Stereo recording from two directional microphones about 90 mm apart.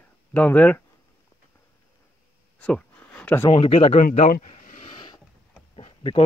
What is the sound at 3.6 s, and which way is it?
Speech, 90° left.